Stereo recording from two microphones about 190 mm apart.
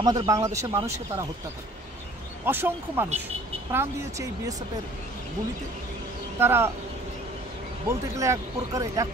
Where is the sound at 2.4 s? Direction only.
10° right (ahead or behind).